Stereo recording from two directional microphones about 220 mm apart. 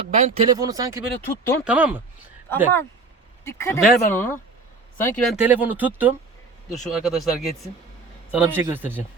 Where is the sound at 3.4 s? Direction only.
10° left (ahead or behind).